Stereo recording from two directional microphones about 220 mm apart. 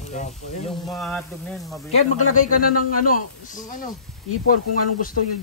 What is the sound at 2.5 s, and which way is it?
Speech, 90° left.